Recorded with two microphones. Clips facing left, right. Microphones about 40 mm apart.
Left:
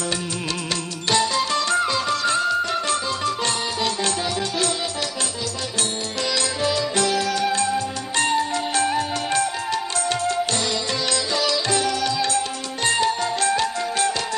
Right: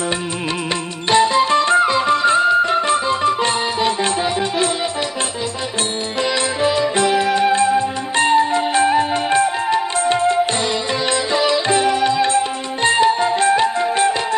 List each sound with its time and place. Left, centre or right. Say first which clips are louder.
1.1 s music: right 8 dB; right
6.6 s music: right 6 dB; right